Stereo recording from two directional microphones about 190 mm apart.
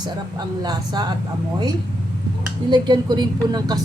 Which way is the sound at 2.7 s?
25° right (ahead or behind).